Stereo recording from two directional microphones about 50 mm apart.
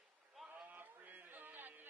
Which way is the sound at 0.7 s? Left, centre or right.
Right.